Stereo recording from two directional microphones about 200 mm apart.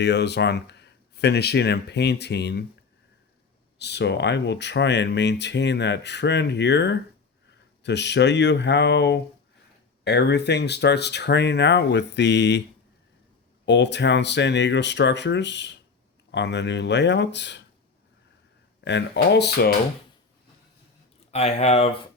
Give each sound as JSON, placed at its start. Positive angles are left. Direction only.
{"t": 0.0, "sound": "speech", "side_deg": 60}
{"t": 3.8, "sound": "speech", "side_deg": 60}
{"t": 13.7, "sound": "speech", "side_deg": 60}
{"t": 18.9, "sound": "speech", "side_deg": 60}
{"t": 21.2, "sound": "speech", "side_deg": 35}